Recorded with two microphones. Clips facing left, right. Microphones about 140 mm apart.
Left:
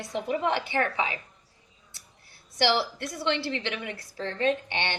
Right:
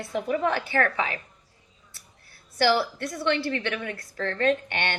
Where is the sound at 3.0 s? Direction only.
50° right (ahead or behind).